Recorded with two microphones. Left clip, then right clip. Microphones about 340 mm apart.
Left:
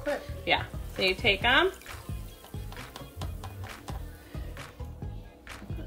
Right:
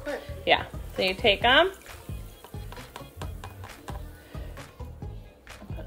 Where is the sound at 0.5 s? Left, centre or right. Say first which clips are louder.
Right 4 dB; right.